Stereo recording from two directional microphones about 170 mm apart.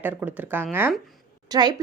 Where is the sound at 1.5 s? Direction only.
20° right (ahead or behind).